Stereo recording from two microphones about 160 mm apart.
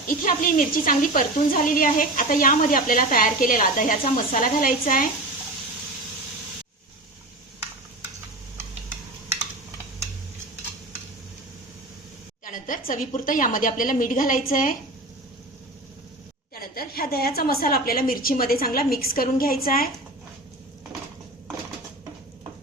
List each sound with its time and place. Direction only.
0.3 s a woman's voice: 60° left (ahead or behind)
12.5 s a woman's voice: 55° left (ahead or behind)
16.6 s a woman's voice: 70° left (ahead or behind)